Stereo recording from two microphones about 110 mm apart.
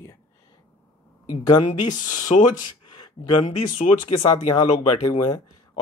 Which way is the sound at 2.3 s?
60° left (ahead or behind).